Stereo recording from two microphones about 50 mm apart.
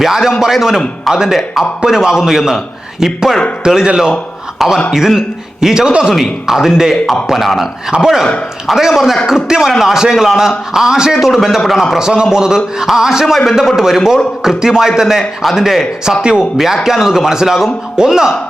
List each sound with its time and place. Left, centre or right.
0.0 s a man's voice: centre
11.9 s speech: centre
16.6 s speech: centre